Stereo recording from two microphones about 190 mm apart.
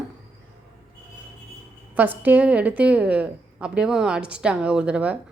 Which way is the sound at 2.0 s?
10° right (ahead or behind).